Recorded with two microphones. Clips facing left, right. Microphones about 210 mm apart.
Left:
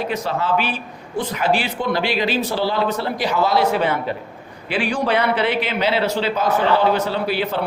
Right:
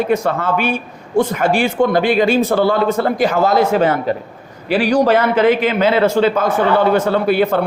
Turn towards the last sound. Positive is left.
turn(degrees=-50)  # may be behind; listen again after turning